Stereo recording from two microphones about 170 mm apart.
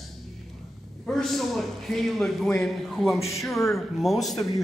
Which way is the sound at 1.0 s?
Centre (ahead or behind).